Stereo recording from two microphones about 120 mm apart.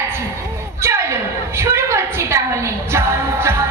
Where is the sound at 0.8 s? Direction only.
20° right (ahead or behind).